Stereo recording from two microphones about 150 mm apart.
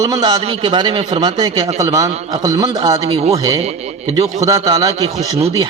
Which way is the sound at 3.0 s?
40° right (ahead or behind).